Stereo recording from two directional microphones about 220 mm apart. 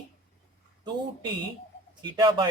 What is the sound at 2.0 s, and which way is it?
Speech, 20° right (ahead or behind).